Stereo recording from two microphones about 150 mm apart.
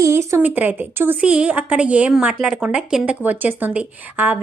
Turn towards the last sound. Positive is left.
turn(degrees=-10)  # may be behind; listen again after turning